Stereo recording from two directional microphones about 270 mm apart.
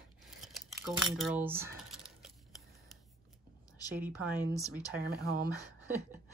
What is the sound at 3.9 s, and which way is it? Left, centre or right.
Speech, centre.